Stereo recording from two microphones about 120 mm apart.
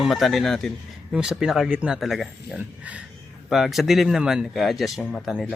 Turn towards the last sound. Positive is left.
turn(degrees=-5)  # may be behind; listen again after turning